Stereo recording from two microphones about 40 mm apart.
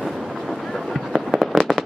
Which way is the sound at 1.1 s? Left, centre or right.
Centre.